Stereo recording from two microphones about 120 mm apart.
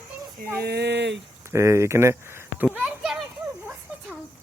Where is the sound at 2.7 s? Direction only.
Centre (ahead or behind).